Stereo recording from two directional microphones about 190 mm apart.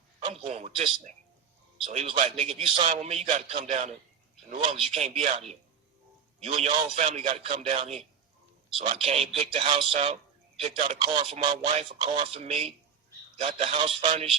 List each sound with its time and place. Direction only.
0.2 s a man's voice: 30° right (ahead or behind)
6.4 s a man's voice: 30° right (ahead or behind)
11.1 s a man's voice: 25° right (ahead or behind)